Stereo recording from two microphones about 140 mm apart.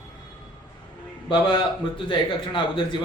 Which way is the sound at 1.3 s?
35° left (ahead or behind).